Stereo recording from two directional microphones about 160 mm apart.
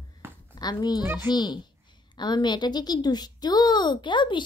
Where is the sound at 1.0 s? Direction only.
10° right (ahead or behind).